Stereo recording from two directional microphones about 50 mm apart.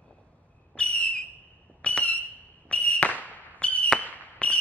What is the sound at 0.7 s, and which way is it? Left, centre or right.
Whistle, left.